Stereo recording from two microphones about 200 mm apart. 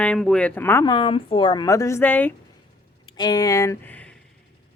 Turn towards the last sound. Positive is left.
turn(degrees=10)  # may be behind; listen again after turning